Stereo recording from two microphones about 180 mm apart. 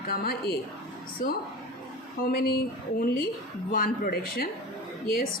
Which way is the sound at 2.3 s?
55° left (ahead or behind).